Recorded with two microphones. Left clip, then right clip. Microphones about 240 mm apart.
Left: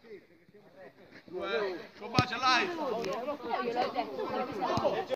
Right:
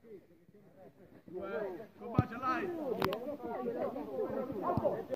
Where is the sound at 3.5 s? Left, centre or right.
Left.